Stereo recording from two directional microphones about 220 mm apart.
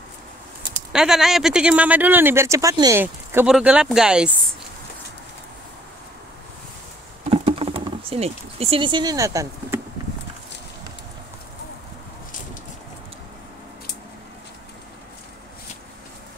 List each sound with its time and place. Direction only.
0.6 s speech: 5° right (ahead or behind)
7.2 s speech: 25° right (ahead or behind)